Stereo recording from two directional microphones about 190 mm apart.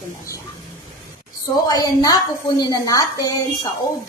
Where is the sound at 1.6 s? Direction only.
20° left (ahead or behind).